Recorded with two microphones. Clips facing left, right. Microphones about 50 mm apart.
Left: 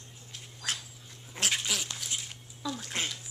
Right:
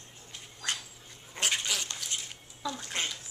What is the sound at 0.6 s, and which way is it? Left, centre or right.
Dog, centre.